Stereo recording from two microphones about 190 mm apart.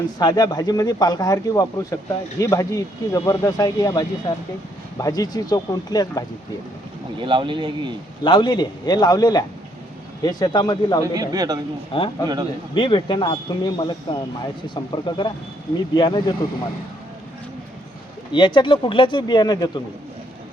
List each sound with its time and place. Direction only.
0.2 s speech: 20° left (ahead or behind)
7.2 s speech: 25° right (ahead or behind)
8.2 s speech: 25° left (ahead or behind)
11.0 s speech: 20° right (ahead or behind)
11.9 s speech: 30° left (ahead or behind)
12.2 s speech: 20° right (ahead or behind)
12.7 s speech: 25° left (ahead or behind)
18.3 s speech: 25° left (ahead or behind)